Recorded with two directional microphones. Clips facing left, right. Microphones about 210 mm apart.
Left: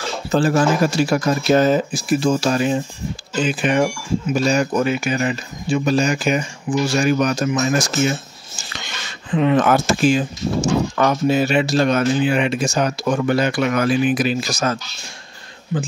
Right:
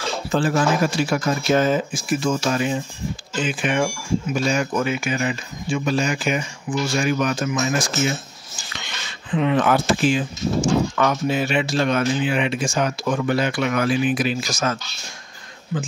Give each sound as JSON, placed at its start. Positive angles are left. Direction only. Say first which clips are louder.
{"t": 0.3, "sound": "speech", "louder": "left 3 dB", "side_deg": 40}